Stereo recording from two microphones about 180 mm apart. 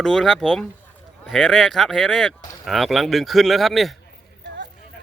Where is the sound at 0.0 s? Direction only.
Centre (ahead or behind).